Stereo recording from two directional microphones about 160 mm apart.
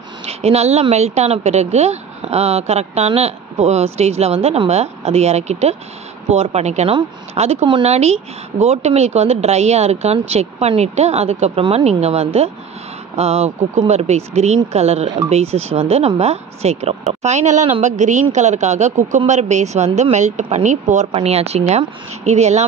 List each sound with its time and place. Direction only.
0.2 s a woman's voice: 40° right (ahead or behind)